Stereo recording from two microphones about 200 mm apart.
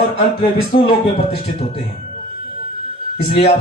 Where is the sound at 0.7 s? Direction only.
30° left (ahead or behind).